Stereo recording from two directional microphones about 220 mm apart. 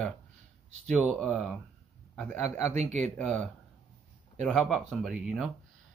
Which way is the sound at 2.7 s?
30° right (ahead or behind).